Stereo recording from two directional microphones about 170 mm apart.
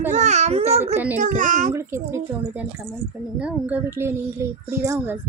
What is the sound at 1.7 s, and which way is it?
Speech, 15° right (ahead or behind).